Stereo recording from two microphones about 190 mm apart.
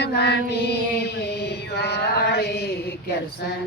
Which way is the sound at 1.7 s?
60° left (ahead or behind).